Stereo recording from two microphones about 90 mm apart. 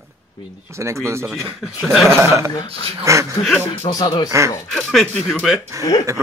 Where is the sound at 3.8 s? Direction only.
50° left (ahead or behind).